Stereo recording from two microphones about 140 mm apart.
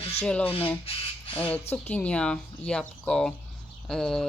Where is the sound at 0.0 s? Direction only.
45° left (ahead or behind).